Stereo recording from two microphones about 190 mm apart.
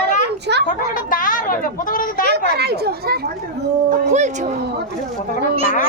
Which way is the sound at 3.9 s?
40° right (ahead or behind).